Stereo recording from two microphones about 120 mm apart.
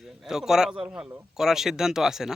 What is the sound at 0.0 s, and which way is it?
A man's voice, 5° right (ahead or behind).